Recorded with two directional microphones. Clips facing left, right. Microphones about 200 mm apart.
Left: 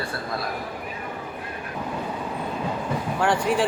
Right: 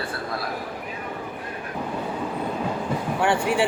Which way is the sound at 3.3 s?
65° right (ahead or behind).